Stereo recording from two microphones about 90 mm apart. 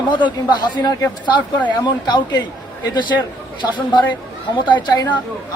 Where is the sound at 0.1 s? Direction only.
60° left (ahead or behind).